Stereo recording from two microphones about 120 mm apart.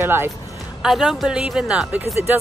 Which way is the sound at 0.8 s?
5° right (ahead or behind).